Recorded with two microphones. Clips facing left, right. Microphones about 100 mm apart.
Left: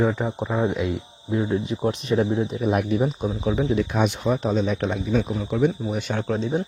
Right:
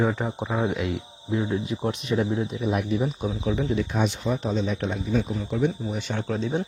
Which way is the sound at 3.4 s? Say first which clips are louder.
Left 3 dB; 35° left (ahead or behind).